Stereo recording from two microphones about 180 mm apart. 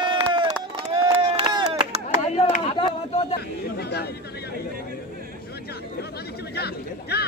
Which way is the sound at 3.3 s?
60° left (ahead or behind).